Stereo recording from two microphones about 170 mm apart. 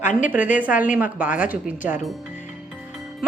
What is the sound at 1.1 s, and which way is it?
Speech, 10° right (ahead or behind).